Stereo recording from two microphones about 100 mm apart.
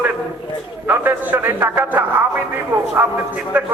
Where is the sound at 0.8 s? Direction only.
20° right (ahead or behind).